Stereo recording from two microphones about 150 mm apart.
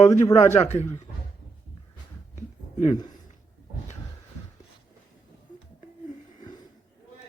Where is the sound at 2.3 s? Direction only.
50° left (ahead or behind).